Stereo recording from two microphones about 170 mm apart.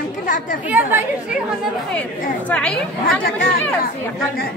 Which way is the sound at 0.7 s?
10° right (ahead or behind).